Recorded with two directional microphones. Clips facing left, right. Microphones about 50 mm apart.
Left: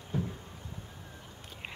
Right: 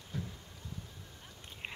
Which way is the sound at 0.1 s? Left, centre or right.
Left.